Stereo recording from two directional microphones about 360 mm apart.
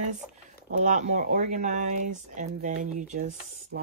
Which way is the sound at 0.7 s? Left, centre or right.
Centre.